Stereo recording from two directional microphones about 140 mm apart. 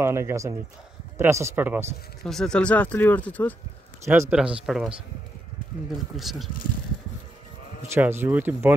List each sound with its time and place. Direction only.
0.0 s speech: 20° right (ahead or behind)
2.2 s speech: 5° left (ahead or behind)
4.0 s speech: 20° right (ahead or behind)
4.3 s speech: 5° right (ahead or behind)
6.1 s speech: centre (ahead or behind)
7.9 s speech: 15° right (ahead or behind)